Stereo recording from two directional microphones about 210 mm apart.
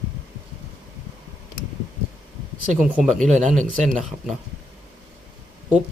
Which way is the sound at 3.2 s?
35° right (ahead or behind).